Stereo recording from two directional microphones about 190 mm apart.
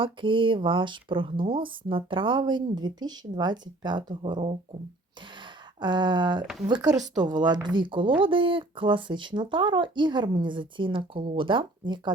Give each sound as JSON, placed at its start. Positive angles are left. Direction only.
{"t": 0.0, "sound": "speech", "side_deg": -25}
{"t": 5.8, "sound": "speech", "side_deg": -25}
{"t": 7.0, "sound": "speech", "side_deg": -40}
{"t": 7.3, "sound": "speech", "side_deg": -20}